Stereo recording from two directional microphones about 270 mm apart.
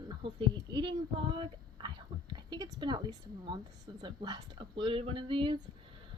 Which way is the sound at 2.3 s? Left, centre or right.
Centre.